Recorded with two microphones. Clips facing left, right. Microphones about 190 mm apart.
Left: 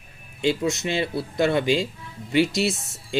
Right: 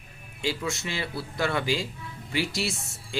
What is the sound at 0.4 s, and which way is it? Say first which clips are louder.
Speech: left 7 dB; 20° left (ahead or behind).